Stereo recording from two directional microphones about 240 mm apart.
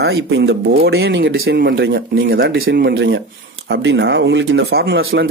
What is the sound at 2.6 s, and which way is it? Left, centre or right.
Speech, right.